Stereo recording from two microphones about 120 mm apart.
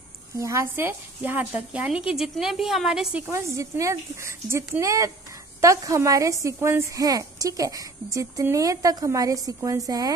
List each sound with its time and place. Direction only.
0.4 s a woman's voice: 25° right (ahead or behind); by 3.3 s 5° right (ahead or behind)
3.3 s a woman's voice: 25° right (ahead or behind)